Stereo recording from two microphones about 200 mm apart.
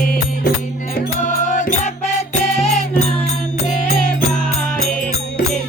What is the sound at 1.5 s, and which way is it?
Music, 35° left (ahead or behind).